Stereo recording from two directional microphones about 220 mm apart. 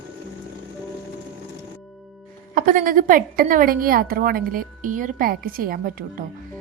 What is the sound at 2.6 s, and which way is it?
A woman's voice, 40° right (ahead or behind).